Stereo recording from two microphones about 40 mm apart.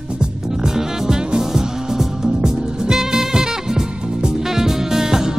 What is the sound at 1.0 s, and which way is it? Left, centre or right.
Music, centre.